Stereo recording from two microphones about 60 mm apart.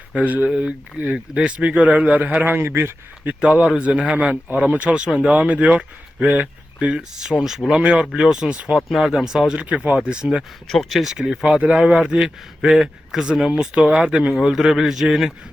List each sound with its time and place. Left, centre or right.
0.1 s speech: right
2.4 s speech: right
3.2 s a man's voice: centre
6.9 s a man's voice: centre
8.7 s a man's voice: centre
9.6 s a man's voice: right
10.7 s a man's voice: centre